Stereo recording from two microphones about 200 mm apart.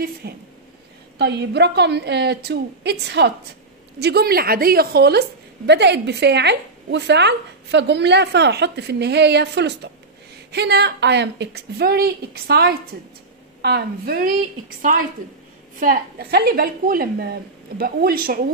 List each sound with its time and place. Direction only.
0.2 s a woman's voice: 50° right (ahead or behind)
15.8 s a woman's voice: 45° right (ahead or behind)